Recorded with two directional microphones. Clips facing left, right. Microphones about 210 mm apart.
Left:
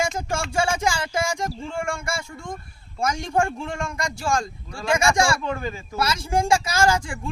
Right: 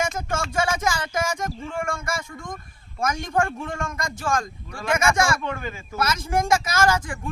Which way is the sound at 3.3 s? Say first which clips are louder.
Left 1 dB; 30° left (ahead or behind).